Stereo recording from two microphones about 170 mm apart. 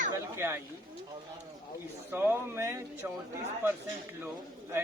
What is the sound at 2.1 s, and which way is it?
Speech, 15° right (ahead or behind).